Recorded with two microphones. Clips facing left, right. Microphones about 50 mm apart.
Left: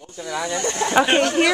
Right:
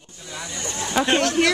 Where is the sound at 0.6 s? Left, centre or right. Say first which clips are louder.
Left 5 dB; left.